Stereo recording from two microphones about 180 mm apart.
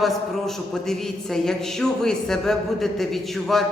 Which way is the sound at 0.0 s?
Centre (ahead or behind).